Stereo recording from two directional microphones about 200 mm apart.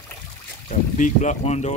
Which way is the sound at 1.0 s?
35° left (ahead or behind).